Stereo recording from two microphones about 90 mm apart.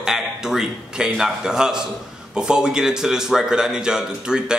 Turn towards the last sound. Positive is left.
turn(degrees=-5)  # may be behind; listen again after turning